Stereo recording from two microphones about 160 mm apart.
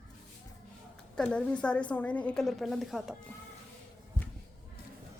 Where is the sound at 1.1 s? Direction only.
5° left (ahead or behind).